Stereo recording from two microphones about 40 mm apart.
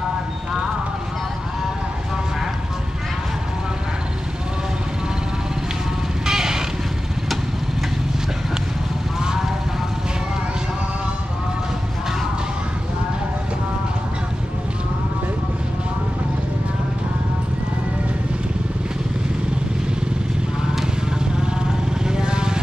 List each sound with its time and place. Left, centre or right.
6.2 s music: centre
9.2 s vehicle: centre
22.0 s vehicle: centre